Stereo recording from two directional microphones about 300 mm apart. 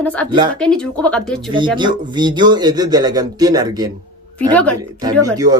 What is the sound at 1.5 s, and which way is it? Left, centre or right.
Speech, centre.